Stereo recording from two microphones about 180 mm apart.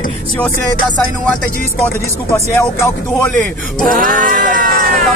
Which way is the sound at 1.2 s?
5° left (ahead or behind).